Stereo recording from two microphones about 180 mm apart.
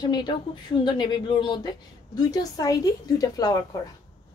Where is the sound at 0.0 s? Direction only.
25° left (ahead or behind).